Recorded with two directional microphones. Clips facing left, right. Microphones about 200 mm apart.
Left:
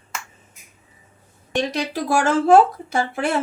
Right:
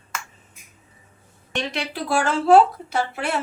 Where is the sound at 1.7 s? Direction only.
45° left (ahead or behind).